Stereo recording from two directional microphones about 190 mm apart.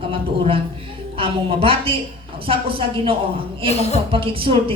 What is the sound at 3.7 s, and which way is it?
Speech, 35° left (ahead or behind).